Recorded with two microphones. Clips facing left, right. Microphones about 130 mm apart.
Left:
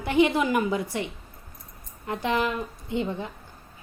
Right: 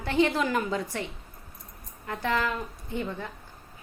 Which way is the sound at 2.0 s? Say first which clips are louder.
Left 2 dB; 20° left (ahead or behind).